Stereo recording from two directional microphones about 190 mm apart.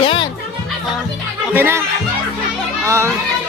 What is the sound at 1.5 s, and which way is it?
Speech, 10° right (ahead or behind).